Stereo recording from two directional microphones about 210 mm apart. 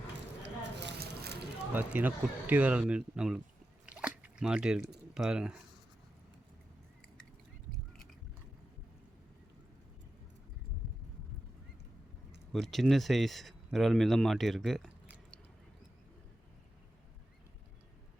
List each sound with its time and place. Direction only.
0.4 s a sound: 55° right (ahead or behind)
1.7 s speech: 10° right (ahead or behind)
3.8 s drip: 5° right (ahead or behind)
5.1 s speech: 5° right (ahead or behind)
12.5 s speech: centre (ahead or behind)